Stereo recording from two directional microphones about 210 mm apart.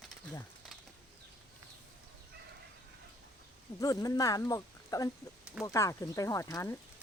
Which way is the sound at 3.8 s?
15° left (ahead or behind).